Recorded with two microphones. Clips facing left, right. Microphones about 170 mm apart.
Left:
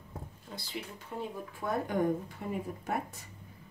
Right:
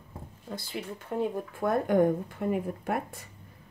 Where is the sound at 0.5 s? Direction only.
55° right (ahead or behind).